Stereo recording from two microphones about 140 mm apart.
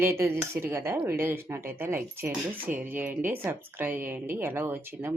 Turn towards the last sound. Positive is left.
turn(degrees=-15)  # may be behind; listen again after turning